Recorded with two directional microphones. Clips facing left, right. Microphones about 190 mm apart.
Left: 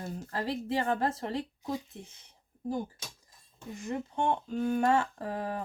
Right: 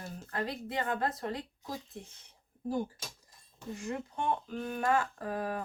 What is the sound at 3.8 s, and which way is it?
A woman's voice, 25° left (ahead or behind).